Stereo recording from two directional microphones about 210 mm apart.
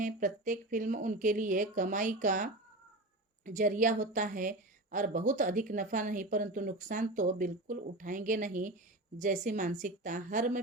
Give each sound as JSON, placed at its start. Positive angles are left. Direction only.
{"t": 0.0, "sound": "a woman's voice", "side_deg": -40}